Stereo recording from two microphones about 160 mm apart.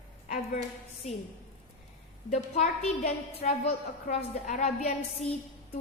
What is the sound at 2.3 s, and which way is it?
A woman's voice, 45° left (ahead or behind).